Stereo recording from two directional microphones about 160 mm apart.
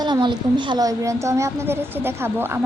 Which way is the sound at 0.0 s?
25° right (ahead or behind).